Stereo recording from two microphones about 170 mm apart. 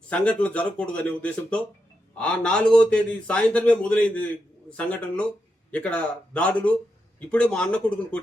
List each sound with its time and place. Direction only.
0.1 s a man's voice: 5° left (ahead or behind)